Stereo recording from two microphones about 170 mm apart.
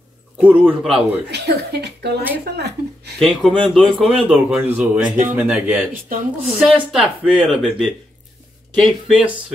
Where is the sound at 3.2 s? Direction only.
5° left (ahead or behind).